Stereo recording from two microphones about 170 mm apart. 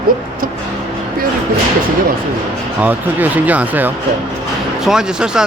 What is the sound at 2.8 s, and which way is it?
Speech, 10° right (ahead or behind).